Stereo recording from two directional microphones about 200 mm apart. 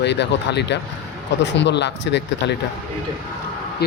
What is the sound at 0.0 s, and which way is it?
Speech, 60° left (ahead or behind).